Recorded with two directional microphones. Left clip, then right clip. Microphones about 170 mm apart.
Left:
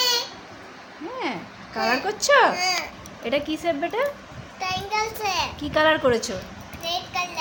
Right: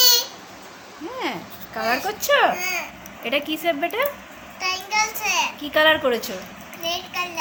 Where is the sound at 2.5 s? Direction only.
60° left (ahead or behind).